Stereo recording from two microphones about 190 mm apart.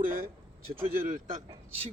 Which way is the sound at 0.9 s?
45° right (ahead or behind).